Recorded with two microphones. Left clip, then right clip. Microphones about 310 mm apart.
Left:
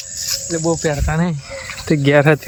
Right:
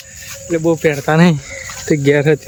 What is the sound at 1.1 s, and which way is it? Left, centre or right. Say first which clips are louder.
Speech: right 9 dB; right.